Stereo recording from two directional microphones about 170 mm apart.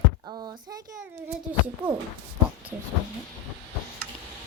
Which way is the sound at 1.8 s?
5° right (ahead or behind).